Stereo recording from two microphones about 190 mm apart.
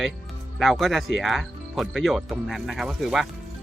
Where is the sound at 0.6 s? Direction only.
Centre (ahead or behind).